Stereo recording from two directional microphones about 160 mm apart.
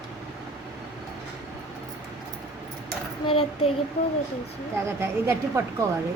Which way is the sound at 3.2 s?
35° left (ahead or behind).